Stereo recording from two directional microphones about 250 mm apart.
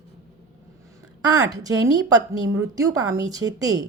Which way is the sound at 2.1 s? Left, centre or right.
Centre.